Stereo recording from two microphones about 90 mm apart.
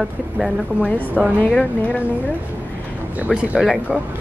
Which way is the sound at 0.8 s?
20° left (ahead or behind).